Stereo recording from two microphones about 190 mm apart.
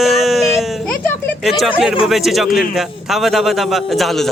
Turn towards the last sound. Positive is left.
turn(degrees=0)  # may be behind; listen again after turning